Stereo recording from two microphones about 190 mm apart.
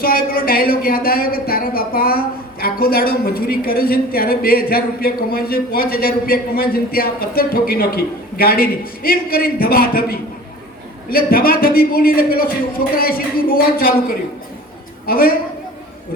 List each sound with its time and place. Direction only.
0.0 s speech: 50° left (ahead or behind)
15.0 s a man's voice: 50° left (ahead or behind)